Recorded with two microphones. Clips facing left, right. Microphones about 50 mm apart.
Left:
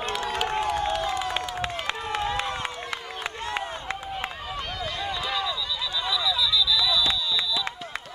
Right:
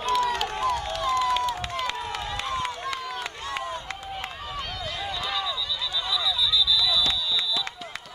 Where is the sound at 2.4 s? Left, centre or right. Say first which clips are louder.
Right 1 dB; left.